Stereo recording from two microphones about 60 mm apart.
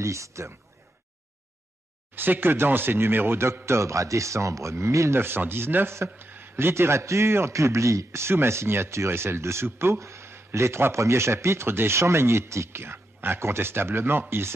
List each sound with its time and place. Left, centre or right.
0.0 s speech: right
2.1 s a man's voice: right
5.2 s a man's voice: right